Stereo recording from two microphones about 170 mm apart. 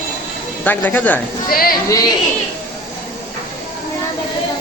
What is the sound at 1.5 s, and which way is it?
Speech, 60° left (ahead or behind).